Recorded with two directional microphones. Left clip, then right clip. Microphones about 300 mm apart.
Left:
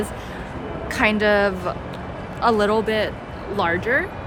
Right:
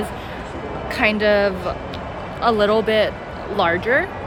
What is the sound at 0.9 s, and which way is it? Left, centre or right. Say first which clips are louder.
A woman's voice: right 1 dB; centre.